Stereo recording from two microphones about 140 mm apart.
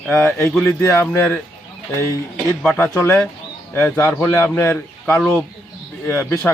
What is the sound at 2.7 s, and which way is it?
Speech, 15° left (ahead or behind).